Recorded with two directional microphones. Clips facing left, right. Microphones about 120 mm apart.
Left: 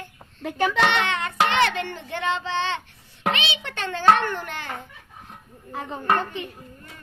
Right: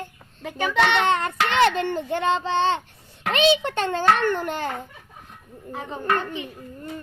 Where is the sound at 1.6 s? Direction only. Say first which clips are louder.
Right 3 dB; 40° right (ahead or behind).